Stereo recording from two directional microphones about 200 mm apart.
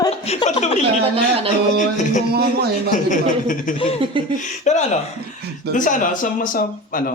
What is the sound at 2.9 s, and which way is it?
Speech, 40° left (ahead or behind).